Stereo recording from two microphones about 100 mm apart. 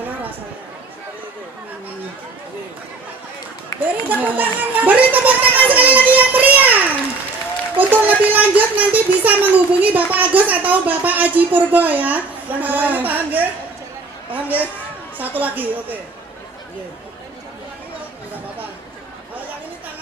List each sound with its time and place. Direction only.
3.7 s run: 35° left (ahead or behind)
4.2 s music: 15° right (ahead or behind)
7.8 s a child's voice: 15° right (ahead or behind)